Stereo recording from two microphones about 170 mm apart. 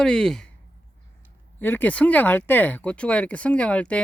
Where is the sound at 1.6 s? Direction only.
10° left (ahead or behind).